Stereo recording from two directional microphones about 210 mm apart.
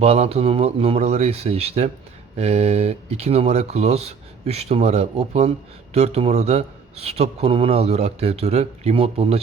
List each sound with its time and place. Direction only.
0.0 s a man's voice: 30° right (ahead or behind)